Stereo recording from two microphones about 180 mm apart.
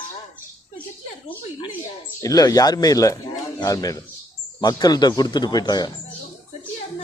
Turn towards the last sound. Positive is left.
turn(degrees=25)  # may be behind; listen again after turning